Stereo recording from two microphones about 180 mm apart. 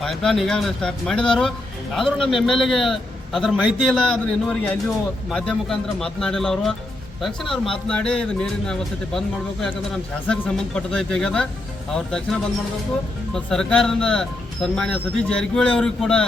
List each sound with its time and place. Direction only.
0.0 s speech: centre (ahead or behind)